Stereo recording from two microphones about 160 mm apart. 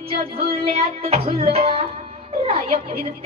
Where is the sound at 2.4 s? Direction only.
40° right (ahead or behind).